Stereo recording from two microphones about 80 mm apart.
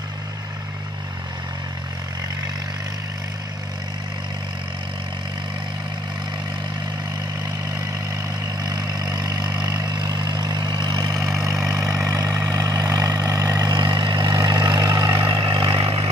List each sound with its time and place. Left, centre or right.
8.6 s vehicle: right
13.7 s vehicle: right
15.2 s vehicle: right